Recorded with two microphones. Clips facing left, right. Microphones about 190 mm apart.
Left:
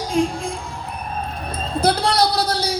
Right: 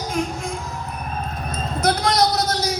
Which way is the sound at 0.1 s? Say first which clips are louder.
Left 6 dB; 30° left (ahead or behind).